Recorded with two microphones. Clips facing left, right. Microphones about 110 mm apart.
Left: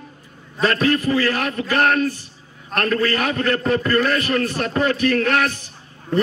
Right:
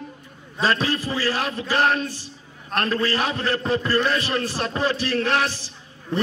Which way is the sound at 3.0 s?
30° right (ahead or behind).